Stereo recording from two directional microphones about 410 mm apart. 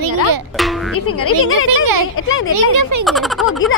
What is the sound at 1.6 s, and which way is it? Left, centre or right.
Speech, right.